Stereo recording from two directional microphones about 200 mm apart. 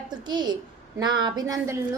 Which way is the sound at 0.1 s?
20° right (ahead or behind).